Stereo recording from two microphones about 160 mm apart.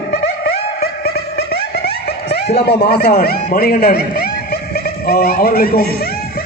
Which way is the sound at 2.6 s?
90° left.